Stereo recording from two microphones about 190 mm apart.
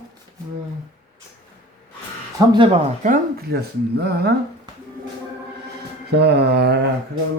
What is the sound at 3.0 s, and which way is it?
Speech, 45° right (ahead or behind).